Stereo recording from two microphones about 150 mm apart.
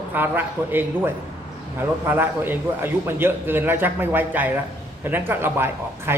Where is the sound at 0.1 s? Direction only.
15° right (ahead or behind).